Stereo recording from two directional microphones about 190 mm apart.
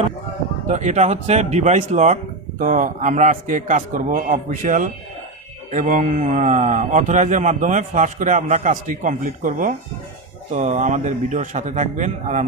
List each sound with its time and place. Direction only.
0.7 s speech: 40° right (ahead or behind)